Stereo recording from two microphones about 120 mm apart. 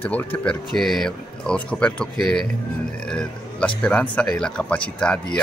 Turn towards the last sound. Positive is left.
turn(degrees=10)  # may be behind; listen again after turning